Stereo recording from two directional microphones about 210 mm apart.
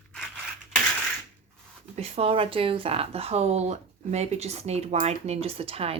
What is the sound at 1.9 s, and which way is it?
A woman's voice, 30° right (ahead or behind).